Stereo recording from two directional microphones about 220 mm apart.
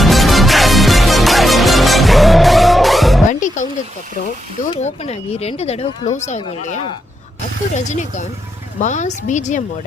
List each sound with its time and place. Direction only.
0.0 s music: centre (ahead or behind)
3.2 s music: 35° left (ahead or behind)
4.7 s speech: 30° left (ahead or behind)
7.9 s speech: 35° left (ahead or behind)